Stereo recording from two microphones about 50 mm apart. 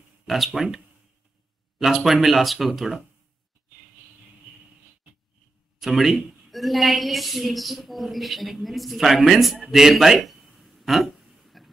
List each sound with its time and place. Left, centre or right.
0.5 s speech: centre
1.8 s a woman's voice: centre
5.8 s a woman's voice: centre
9.7 s a sound: centre